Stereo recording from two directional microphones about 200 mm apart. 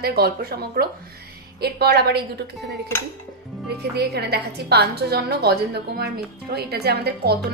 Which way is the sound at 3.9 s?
55° right (ahead or behind).